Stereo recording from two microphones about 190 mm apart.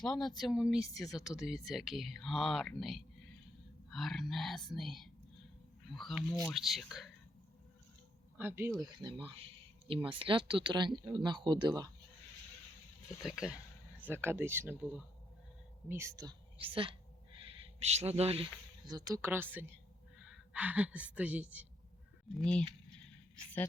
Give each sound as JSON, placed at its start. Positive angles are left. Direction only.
{"t": 0.0, "sound": "speech", "side_deg": 5}
{"t": 8.4, "sound": "speech", "side_deg": -10}
{"t": 13.2, "sound": "a woman's voice", "side_deg": -5}
{"t": 18.9, "sound": "a woman's voice", "side_deg": -20}
{"t": 22.4, "sound": "speech", "side_deg": 5}